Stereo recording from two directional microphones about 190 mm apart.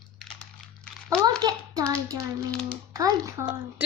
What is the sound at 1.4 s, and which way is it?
Speech, 20° right (ahead or behind).